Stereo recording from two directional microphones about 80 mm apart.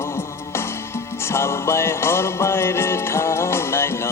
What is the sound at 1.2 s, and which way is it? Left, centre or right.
Music, left.